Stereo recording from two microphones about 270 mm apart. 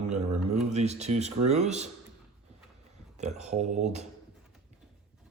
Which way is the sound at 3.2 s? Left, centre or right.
Right.